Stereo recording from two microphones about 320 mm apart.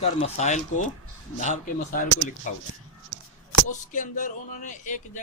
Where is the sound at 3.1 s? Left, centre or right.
Right.